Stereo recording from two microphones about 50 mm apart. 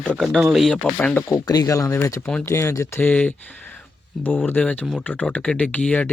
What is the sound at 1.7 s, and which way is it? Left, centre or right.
Speech, left.